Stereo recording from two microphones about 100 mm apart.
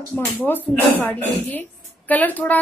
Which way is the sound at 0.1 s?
20° left (ahead or behind).